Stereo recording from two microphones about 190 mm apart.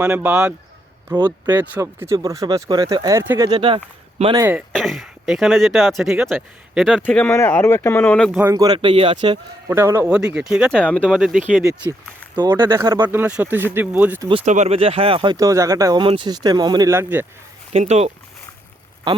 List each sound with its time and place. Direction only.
0.0 s speech: 5° right (ahead or behind)
1.1 s speech: 20° right (ahead or behind)
4.4 s speech: 10° right (ahead or behind)
4.7 s speech: centre (ahead or behind)
8.4 s speech: 15° right (ahead or behind)
9.6 s speech: 15° right (ahead or behind)
10.8 s speech: 5° left (ahead or behind)
11.0 s speech: 5° right (ahead or behind)
14.4 s speech: 40° right (ahead or behind); by 17.2 s 10° right (ahead or behind)
17.7 s speech: 35° right (ahead or behind)